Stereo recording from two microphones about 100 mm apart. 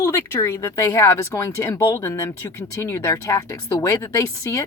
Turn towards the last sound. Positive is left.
turn(degrees=30)  # may be behind; listen again after turning